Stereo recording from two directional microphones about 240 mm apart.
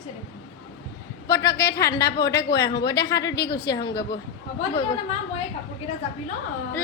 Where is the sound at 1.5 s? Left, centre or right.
Left.